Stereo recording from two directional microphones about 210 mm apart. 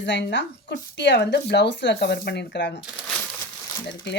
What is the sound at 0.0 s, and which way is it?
Speech, 55° left (ahead or behind).